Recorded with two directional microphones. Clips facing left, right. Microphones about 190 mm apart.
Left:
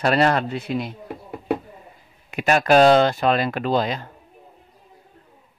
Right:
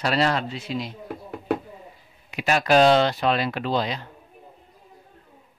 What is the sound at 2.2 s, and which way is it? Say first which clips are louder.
Speech: left 3 dB; 50° left (ahead or behind).